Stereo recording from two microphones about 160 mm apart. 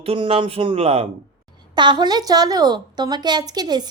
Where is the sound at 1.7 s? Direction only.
30° right (ahead or behind).